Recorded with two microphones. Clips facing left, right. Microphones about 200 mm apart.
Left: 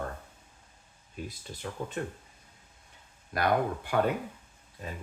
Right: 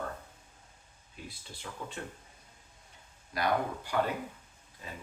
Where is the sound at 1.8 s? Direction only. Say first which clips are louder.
Left 5 dB; 45° left (ahead or behind).